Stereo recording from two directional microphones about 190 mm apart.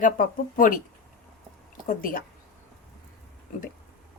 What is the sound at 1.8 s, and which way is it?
Speech, 45° left (ahead or behind).